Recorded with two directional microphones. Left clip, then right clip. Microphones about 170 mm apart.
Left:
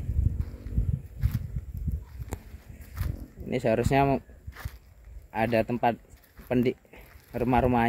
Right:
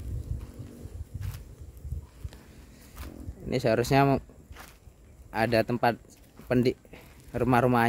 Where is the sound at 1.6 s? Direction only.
Centre (ahead or behind).